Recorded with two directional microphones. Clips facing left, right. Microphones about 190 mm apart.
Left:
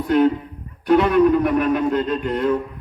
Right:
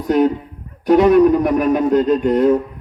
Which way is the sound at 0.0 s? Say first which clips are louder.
Right 1 dB; 40° right (ahead or behind).